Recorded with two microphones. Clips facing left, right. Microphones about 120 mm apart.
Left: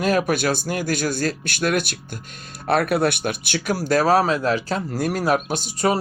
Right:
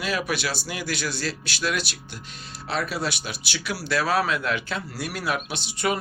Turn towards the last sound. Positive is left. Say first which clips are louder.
# left 5 dB
turn(degrees=40)  # may be behind; listen again after turning